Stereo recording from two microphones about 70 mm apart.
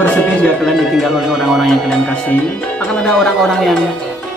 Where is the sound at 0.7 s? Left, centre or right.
Centre.